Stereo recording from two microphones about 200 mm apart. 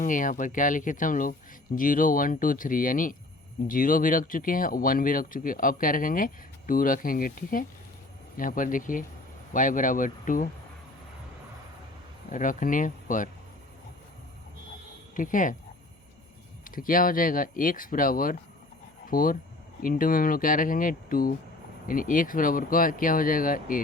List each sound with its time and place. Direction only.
0.0 s speech: 40° left (ahead or behind)
12.3 s speech: 40° left (ahead or behind)
15.1 s speech: 40° left (ahead or behind)
16.6 s speech: 45° left (ahead or behind)